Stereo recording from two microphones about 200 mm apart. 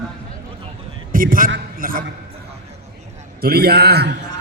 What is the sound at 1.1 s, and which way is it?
Speech, 45° right (ahead or behind).